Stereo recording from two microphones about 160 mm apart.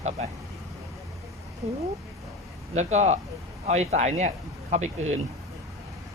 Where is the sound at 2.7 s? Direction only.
45° right (ahead or behind).